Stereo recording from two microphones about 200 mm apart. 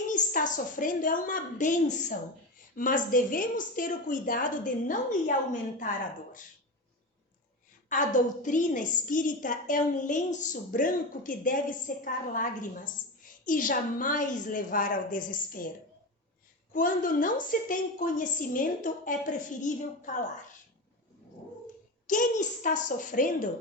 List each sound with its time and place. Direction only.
0.1 s a woman's voice: 40° left (ahead or behind)
7.9 s a woman's voice: 40° left (ahead or behind)
16.7 s a woman's voice: 45° left (ahead or behind)
22.0 s a woman's voice: 40° left (ahead or behind)